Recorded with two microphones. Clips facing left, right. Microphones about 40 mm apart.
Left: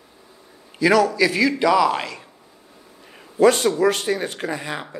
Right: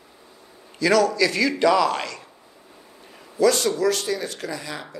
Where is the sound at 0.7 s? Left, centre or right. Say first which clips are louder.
Left 2 dB; centre.